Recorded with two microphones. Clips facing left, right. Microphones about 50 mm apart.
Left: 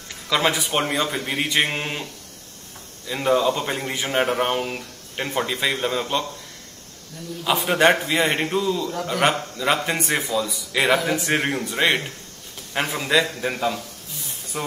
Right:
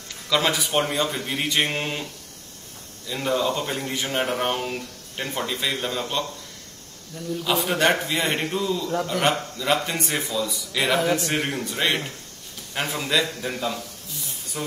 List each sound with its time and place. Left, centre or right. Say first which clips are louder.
0.3 s a man's voice: left 1 dB; centre
3.1 s a man's voice: left 4 dB; centre
3.6 s a man's voice: left 2 dB; centre
7.4 s a man's voice: left 4 dB; centre
8.5 s a man's voice: left 3 dB; centre
9.0 s a man's voice: left 4 dB; centre
10.1 s a man's voice: left 3 dB; centre